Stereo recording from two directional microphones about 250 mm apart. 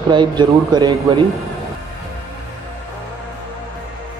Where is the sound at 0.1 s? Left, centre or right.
Centre.